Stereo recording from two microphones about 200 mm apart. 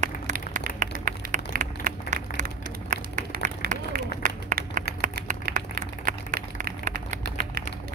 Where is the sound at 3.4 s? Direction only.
45° right (ahead or behind).